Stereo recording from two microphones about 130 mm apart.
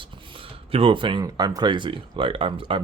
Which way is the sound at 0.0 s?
45° right (ahead or behind).